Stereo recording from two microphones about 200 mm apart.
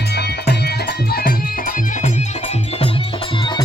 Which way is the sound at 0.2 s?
55° left (ahead or behind).